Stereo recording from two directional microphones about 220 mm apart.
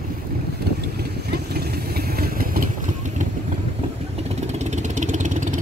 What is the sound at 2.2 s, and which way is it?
Vehicle, 40° right (ahead or behind).